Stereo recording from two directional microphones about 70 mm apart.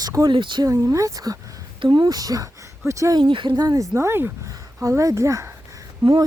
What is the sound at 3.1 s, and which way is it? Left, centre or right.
Speech, right.